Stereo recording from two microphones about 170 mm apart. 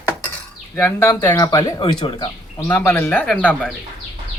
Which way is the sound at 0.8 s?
15° left (ahead or behind).